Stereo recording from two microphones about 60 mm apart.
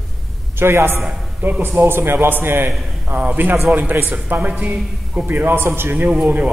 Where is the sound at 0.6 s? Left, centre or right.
Right.